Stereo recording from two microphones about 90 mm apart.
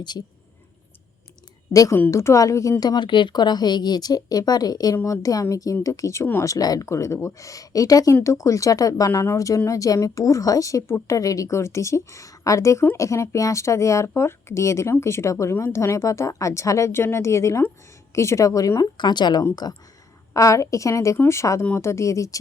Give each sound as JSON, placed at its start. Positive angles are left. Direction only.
{"t": 1.7, "sound": "speech", "side_deg": 40}
{"t": 2.8, "sound": "speech", "side_deg": 55}
{"t": 18.9, "sound": "speech", "side_deg": 55}
{"t": 20.3, "sound": "speech", "side_deg": 40}